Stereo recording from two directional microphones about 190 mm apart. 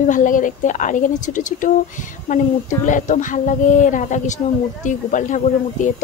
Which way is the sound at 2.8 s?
40° left (ahead or behind).